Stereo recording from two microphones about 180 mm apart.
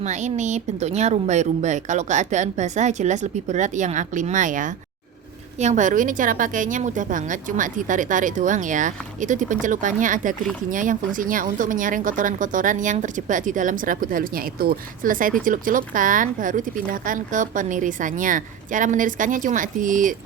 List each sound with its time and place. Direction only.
0.0 s a woman's voice: 40° right (ahead or behind)